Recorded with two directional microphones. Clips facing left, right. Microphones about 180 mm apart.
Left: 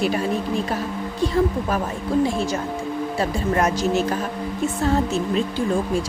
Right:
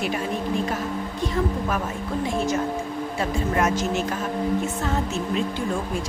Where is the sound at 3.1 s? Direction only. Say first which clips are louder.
Left 2 dB; 35° left (ahead or behind).